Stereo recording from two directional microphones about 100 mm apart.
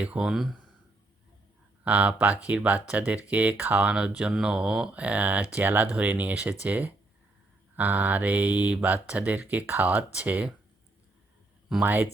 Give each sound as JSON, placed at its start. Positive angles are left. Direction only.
{"t": 0.0, "sound": "speech", "side_deg": -10}
{"t": 1.8, "sound": "speech", "side_deg": -15}
{"t": 11.8, "sound": "speech", "side_deg": -20}